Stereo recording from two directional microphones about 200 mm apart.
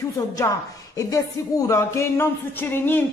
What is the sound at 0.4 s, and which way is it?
A woman's voice, 15° left (ahead or behind).